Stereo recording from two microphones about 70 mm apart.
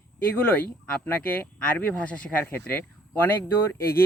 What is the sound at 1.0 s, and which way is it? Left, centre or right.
Speech, left.